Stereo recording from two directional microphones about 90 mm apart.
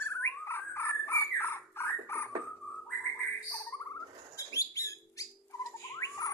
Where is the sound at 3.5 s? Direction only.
30° left (ahead or behind).